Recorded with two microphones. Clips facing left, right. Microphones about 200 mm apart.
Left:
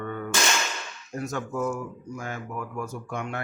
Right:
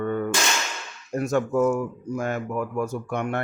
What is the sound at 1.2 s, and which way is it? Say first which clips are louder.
Speech: right 8 dB; 65° right (ahead or behind).